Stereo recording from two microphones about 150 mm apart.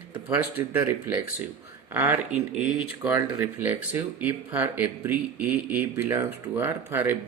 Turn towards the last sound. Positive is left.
turn(degrees=-15)  # may be behind; listen again after turning